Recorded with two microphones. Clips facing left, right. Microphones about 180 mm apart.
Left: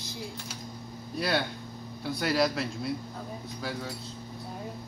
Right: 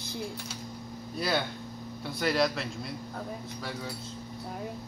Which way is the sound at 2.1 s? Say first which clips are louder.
Left 1 dB; centre (ahead or behind).